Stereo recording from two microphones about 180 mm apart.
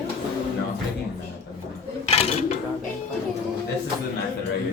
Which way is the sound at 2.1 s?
35° left (ahead or behind).